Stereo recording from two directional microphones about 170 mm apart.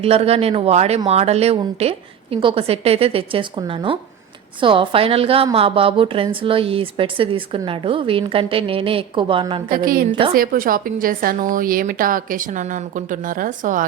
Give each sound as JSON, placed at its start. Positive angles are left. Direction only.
{"t": 0.0, "sound": "speech", "side_deg": -35}
{"t": 9.6, "sound": "a woman's voice", "side_deg": -55}
{"t": 10.1, "sound": "speech", "side_deg": -30}
{"t": 10.3, "sound": "a woman's voice", "side_deg": -55}